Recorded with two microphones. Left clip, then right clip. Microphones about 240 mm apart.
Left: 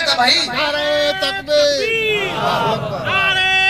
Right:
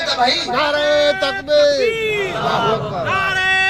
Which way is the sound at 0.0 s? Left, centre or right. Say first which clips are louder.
Left 2 dB; left.